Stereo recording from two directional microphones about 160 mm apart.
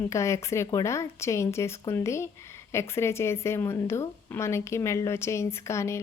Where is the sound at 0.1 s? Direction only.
20° left (ahead or behind).